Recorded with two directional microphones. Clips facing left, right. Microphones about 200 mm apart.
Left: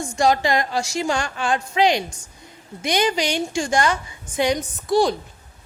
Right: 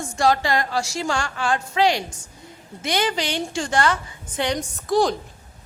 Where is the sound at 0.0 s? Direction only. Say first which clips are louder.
Left 1 dB; 15° left (ahead or behind).